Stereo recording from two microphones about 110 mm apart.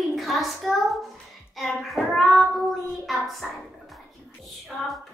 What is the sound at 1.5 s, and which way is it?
Child singing, centre (ahead or behind).